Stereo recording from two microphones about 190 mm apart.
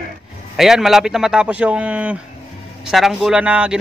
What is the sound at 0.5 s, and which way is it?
A man's voice, centre (ahead or behind).